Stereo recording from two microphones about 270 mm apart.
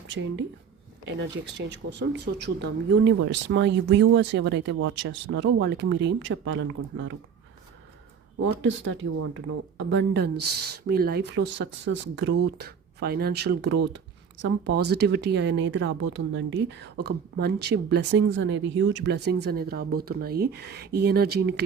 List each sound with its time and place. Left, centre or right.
0.1 s speech: right
8.6 s speech: right